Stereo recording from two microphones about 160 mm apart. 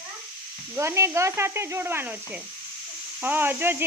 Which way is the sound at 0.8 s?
15° right (ahead or behind).